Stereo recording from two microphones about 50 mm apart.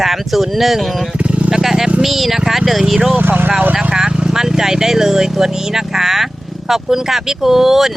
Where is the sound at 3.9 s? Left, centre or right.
Centre.